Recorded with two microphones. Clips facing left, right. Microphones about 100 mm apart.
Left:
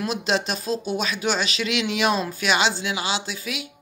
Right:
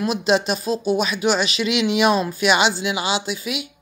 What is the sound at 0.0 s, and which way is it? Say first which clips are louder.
Speech: right 5 dB; 10° right (ahead or behind).